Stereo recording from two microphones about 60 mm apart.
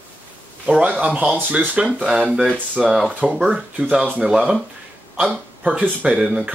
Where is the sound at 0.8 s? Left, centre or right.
Right.